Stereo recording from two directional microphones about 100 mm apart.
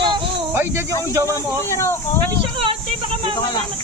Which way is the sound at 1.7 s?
30° left (ahead or behind).